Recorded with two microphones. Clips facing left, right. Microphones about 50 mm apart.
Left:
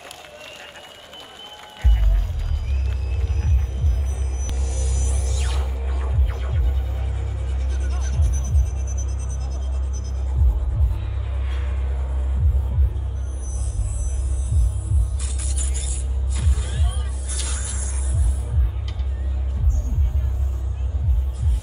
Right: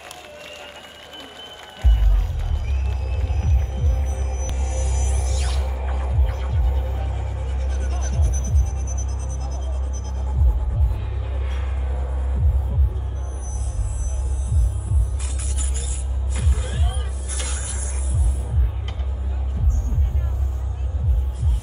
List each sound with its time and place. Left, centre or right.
3.9 s heart sounds: right
4.6 s music: right
5.4 s music: left
7.7 s music: right
16.3 s music: right